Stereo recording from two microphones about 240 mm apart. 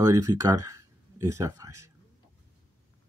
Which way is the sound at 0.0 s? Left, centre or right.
Centre.